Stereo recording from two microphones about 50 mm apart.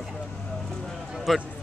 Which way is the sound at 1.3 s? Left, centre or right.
Centre.